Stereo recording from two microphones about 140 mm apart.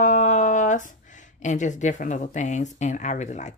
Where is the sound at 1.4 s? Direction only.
60° left (ahead or behind).